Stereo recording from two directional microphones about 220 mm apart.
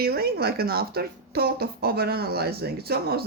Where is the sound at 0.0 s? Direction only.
45° right (ahead or behind).